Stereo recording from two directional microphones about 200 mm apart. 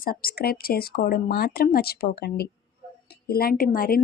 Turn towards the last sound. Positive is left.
turn(degrees=45)  # may be behind; listen again after turning